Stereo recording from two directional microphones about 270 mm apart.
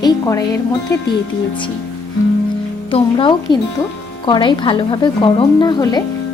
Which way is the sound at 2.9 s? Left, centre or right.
Centre.